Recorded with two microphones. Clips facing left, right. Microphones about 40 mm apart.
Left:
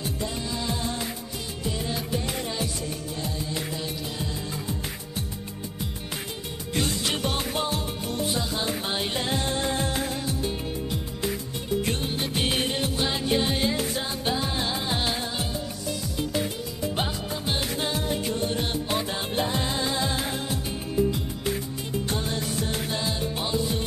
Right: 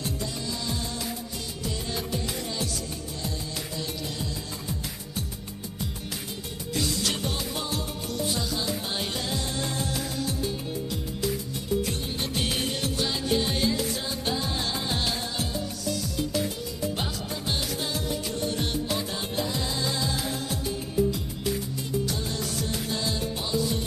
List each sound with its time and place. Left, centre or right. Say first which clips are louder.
0.2 s music: left 2 dB; left
3.2 s music: left 3 dB; left
6.7 s music: left 1 dB; left
8.9 s music of bollywood: left 3 dB; left
11.8 s music: left 3 dB; left
12.4 s music: left 3 dB; left
16.9 s music: left 3 dB; left
17.7 s music: left 3 dB; left
22.1 s music: left 3 dB; left